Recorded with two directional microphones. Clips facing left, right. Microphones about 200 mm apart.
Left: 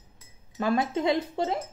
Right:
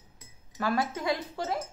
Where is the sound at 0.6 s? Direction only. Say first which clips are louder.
Left 4 dB; 20° left (ahead or behind).